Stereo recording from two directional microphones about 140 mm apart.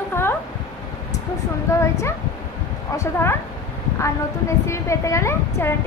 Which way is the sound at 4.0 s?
20° left (ahead or behind).